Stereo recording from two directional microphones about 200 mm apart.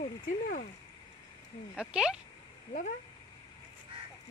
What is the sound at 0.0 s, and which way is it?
Speech, 45° left (ahead or behind).